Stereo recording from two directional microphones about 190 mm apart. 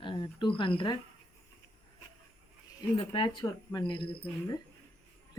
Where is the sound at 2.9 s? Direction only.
25° left (ahead or behind).